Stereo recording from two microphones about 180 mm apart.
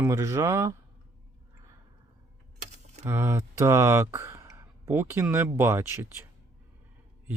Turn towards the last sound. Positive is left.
turn(degrees=-10)  # may be behind; listen again after turning